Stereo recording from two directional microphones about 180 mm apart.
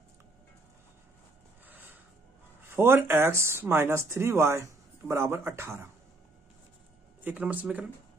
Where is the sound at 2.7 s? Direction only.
15° right (ahead or behind).